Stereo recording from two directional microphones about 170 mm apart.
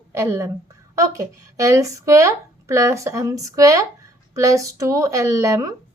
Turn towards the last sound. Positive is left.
turn(degrees=-20)  # may be behind; listen again after turning